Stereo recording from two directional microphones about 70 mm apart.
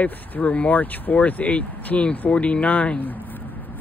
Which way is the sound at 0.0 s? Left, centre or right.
Left.